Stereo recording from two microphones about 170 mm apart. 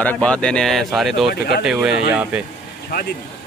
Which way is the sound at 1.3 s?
70° left (ahead or behind).